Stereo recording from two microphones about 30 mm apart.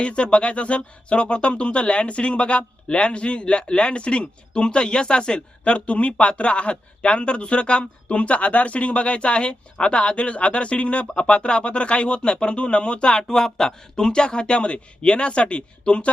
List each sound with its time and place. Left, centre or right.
0.0 s speech: left
13.3 s speech: centre
13.9 s speech: left